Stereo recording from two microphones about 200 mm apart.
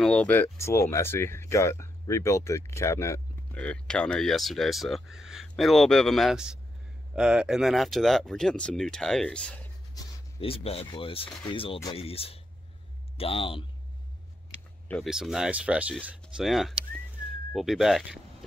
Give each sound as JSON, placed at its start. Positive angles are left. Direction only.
{"t": 0.0, "sound": "speech", "side_deg": 5}
{"t": 9.9, "sound": "speech", "side_deg": 30}
{"t": 14.9, "sound": "speech", "side_deg": 0}